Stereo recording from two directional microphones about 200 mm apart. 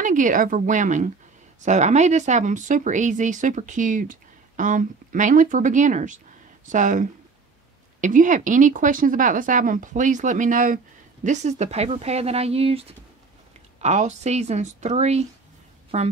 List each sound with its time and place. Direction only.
0.0 s speech: 40° right (ahead or behind)